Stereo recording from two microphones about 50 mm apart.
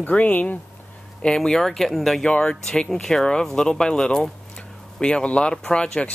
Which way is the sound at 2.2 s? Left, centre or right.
Centre.